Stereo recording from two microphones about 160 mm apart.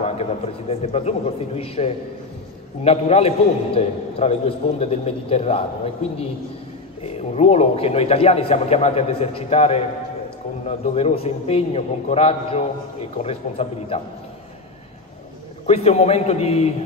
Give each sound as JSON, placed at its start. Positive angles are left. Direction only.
{"t": 0.0, "sound": "speech", "side_deg": 40}
{"t": 7.0, "sound": "speech", "side_deg": 40}
{"t": 15.6, "sound": "speech", "side_deg": 40}